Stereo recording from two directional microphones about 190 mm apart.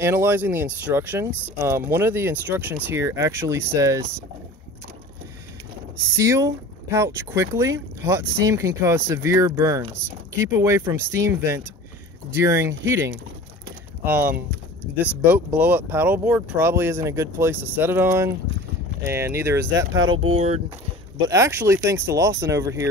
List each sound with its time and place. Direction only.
0.0 s speech: 10° right (ahead or behind)
6.0 s speech: 15° right (ahead or behind)
14.8 s speech: 10° left (ahead or behind)
15.2 s speech: 10° right (ahead or behind)
20.2 s speech: 30° right (ahead or behind)
21.3 s speech: 15° right (ahead or behind)